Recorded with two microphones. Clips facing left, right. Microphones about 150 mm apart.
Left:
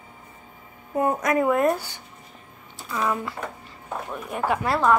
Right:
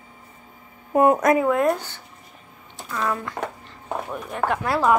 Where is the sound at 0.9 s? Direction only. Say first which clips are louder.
Right 6 dB; 80° right.